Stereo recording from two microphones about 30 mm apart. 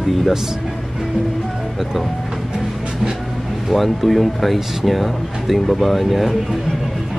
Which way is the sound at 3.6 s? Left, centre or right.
Centre.